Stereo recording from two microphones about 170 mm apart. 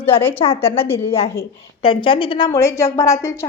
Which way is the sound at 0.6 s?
15° left (ahead or behind).